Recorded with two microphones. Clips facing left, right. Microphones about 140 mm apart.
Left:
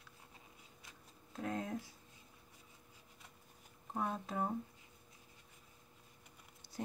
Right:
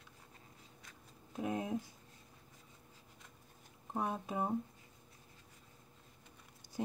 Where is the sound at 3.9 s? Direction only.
15° right (ahead or behind).